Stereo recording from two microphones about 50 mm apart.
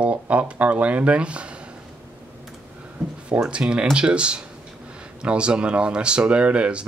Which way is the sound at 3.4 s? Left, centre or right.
Centre.